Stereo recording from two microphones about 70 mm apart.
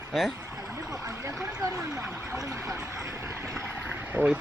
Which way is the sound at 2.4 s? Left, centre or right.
Right.